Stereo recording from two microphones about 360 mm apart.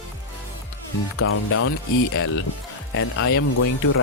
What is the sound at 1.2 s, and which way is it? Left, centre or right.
Speech, left.